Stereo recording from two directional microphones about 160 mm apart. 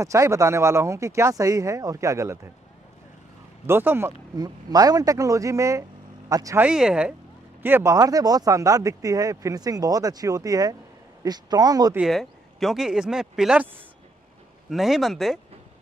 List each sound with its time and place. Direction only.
0.0 s speech: 20° right (ahead or behind)
3.6 s speech: 15° right (ahead or behind)
6.6 s speech: 5° right (ahead or behind)
7.6 s speech: 15° right (ahead or behind)
11.9 s speech: centre (ahead or behind)
14.7 s speech: centre (ahead or behind)